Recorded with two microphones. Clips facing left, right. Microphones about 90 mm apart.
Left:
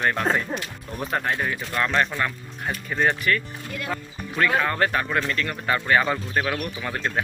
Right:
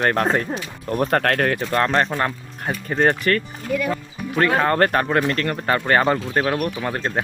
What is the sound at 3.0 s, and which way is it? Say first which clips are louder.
Speech: right 4 dB; 50° right (ahead or behind).